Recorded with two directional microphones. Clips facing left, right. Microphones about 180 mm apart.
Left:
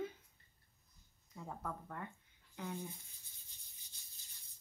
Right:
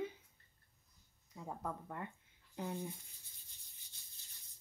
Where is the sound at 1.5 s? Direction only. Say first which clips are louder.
Right 2 dB; 15° right (ahead or behind).